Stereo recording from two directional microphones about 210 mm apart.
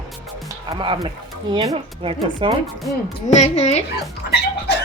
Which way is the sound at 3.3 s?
30° left (ahead or behind).